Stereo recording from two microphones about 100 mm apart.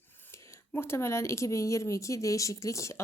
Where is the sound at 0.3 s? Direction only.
25° left (ahead or behind).